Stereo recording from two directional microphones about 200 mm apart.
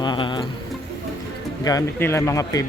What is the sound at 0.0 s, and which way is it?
Music, 20° left (ahead or behind).